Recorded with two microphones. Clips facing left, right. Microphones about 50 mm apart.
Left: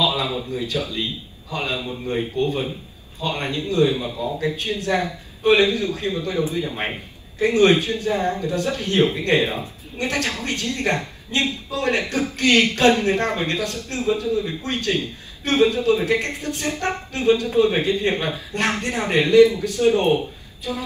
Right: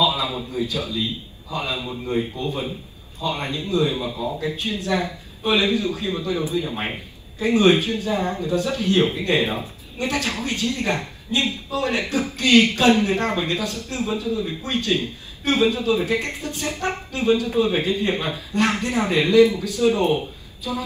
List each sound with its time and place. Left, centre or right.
0.0 s a sound: left
1.5 s a man's voice: left
4.1 s a man's voice: right
4.6 s a man's voice: left